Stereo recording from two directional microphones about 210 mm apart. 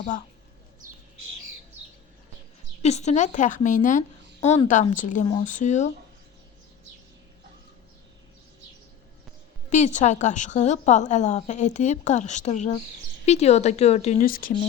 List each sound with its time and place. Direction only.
2.8 s a woman's voice: 30° left (ahead or behind)
9.6 s a woman's voice: 35° left (ahead or behind)